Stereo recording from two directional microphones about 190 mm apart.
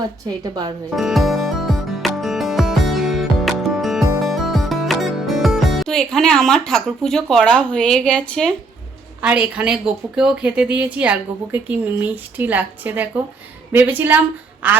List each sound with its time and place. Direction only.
0.3 s a woman's voice: 20° right (ahead or behind)
0.9 s music: centre (ahead or behind)
4.3 s speech: centre (ahead or behind)
9.2 s a woman's voice: 5° right (ahead or behind)